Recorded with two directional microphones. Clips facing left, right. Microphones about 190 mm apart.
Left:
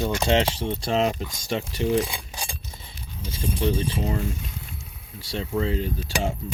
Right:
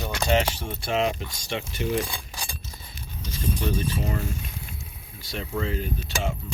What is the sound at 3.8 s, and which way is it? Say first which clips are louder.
Speech: left 2 dB; 25° left (ahead or behind).